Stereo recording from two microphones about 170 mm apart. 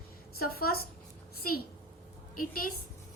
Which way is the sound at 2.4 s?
55° left (ahead or behind).